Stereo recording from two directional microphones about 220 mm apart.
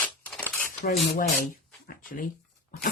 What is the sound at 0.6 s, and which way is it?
Cutlery, 45° left (ahead or behind).